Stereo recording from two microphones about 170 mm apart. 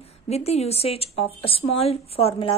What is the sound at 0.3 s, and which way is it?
A woman's voice, 40° left (ahead or behind).